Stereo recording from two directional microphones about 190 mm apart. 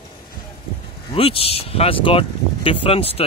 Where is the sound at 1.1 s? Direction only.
30° left (ahead or behind).